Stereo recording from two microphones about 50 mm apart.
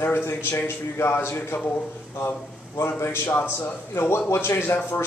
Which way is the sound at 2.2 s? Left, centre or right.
Left.